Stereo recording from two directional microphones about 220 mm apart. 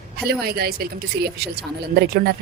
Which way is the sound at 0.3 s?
45° right (ahead or behind).